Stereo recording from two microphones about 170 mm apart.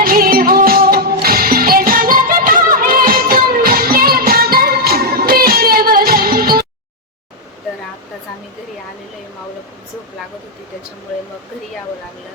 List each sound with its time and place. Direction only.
0.0 s music: 60° right (ahead or behind)